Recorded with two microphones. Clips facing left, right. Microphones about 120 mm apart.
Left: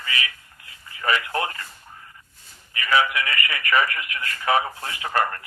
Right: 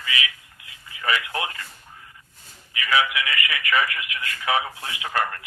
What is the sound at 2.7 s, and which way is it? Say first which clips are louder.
Speech: left 2 dB; 40° left (ahead or behind).